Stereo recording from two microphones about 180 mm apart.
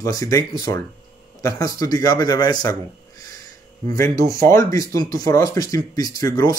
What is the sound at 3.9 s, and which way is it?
Speech, 15° left (ahead or behind).